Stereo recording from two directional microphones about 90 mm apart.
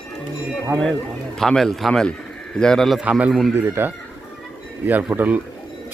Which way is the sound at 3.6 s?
25° right (ahead or behind).